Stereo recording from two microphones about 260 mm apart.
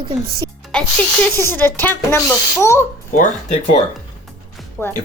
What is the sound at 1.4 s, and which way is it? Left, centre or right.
A child's voice, centre.